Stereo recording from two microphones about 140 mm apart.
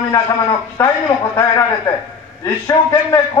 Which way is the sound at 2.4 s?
20° left (ahead or behind).